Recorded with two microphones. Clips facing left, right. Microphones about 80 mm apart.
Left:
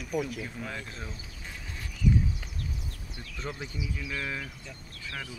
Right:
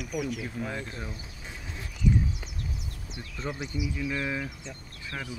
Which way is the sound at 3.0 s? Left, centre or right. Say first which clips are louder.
Right 3 dB; centre.